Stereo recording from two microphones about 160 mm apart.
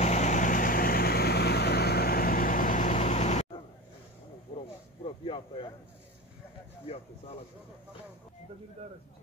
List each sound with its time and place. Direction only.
0.0 s vehicle: 45° left (ahead or behind)
5.0 s speech: 35° left (ahead or behind)